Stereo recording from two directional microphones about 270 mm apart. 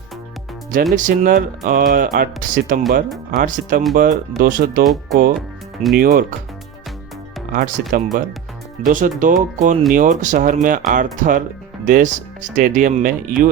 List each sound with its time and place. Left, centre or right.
0.9 s speech: right
7.5 s speech: right